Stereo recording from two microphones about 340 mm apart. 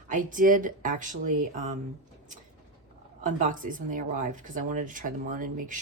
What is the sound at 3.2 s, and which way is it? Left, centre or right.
Speech, right.